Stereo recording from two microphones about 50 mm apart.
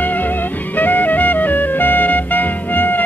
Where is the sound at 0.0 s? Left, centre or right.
Left.